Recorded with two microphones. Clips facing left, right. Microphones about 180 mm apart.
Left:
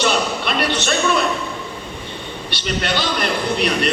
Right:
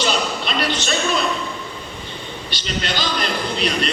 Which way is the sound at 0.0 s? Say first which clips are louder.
Left 2 dB; 60° left (ahead or behind).